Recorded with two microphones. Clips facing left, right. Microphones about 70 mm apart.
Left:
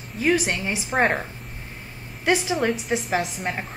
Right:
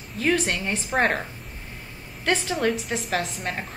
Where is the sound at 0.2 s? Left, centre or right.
Centre.